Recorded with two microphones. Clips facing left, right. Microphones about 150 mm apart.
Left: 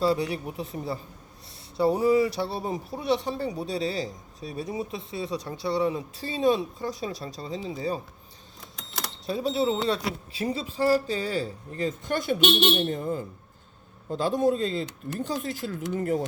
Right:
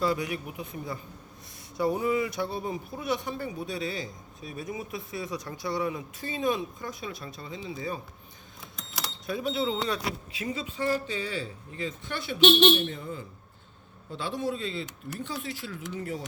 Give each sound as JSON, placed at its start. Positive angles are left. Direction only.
{"t": 0.0, "sound": "speech", "side_deg": 30}
{"t": 9.2, "sound": "speech", "side_deg": 30}